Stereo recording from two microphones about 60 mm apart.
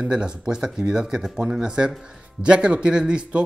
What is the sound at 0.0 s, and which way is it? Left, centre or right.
Speech, centre.